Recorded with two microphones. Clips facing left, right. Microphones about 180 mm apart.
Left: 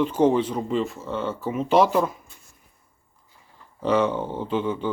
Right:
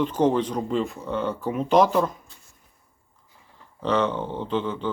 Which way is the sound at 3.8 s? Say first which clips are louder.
Left 2 dB; 10° left (ahead or behind).